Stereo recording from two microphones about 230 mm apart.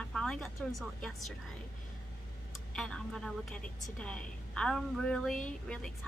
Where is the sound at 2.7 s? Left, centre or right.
Centre.